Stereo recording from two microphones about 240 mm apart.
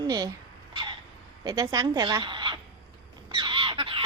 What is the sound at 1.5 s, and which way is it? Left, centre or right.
Speech, centre.